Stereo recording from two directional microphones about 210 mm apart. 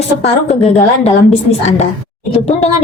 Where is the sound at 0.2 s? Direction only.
30° left (ahead or behind).